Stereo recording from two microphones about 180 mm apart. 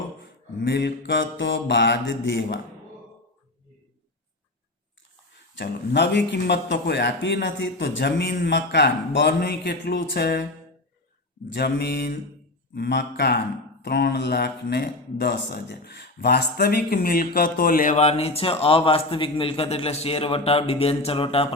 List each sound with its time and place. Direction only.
0.2 s a man's voice: 75° left (ahead or behind)
5.5 s a man's voice: 75° left (ahead or behind)
11.4 s a man's voice: 70° left (ahead or behind); by 21.5 s 30° left (ahead or behind)